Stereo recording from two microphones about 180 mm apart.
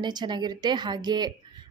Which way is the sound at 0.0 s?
25° right (ahead or behind).